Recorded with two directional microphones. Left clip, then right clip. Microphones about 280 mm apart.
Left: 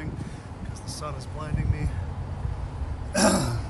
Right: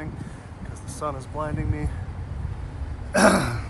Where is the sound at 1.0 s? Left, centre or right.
Centre.